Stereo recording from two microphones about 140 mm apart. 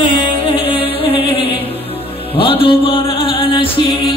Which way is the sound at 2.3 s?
40° left (ahead or behind).